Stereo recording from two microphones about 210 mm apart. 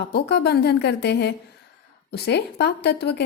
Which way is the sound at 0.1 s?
50° left (ahead or behind).